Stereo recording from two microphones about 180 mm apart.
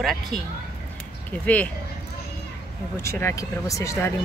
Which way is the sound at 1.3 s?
10° left (ahead or behind).